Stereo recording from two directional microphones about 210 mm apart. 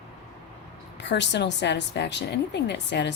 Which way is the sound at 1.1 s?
55° left (ahead or behind).